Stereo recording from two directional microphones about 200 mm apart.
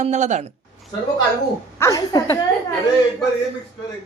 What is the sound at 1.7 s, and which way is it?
Speech, 15° left (ahead or behind).